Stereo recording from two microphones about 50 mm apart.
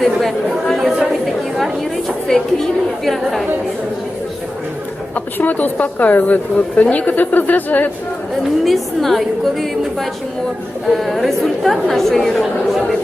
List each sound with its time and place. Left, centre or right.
0.2 s a woman's voice: centre
5.1 s a woman's voice: left
8.6 s a woman's voice: centre